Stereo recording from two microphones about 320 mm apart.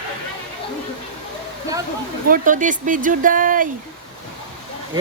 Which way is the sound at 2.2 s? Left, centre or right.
Right.